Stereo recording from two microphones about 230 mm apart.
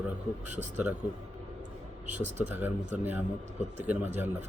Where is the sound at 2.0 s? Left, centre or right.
Right.